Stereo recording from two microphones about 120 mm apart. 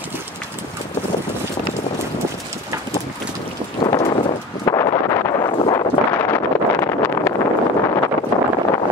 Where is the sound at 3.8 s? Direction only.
45° left (ahead or behind).